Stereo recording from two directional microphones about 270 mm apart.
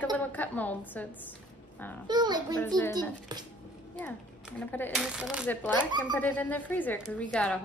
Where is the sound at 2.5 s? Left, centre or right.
Centre.